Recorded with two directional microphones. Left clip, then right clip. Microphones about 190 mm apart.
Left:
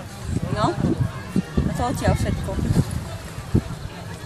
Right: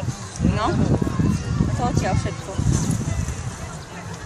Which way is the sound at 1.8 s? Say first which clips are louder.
Even; 40° left (ahead or behind).